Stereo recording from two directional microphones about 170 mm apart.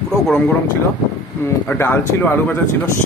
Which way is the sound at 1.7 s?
10° left (ahead or behind).